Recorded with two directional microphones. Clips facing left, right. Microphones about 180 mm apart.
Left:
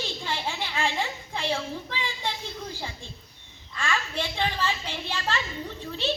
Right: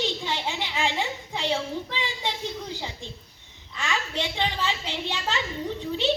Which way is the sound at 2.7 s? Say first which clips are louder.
Right 2 dB; 20° right (ahead or behind).